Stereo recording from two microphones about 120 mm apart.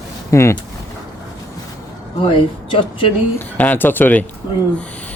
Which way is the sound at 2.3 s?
45° left (ahead or behind).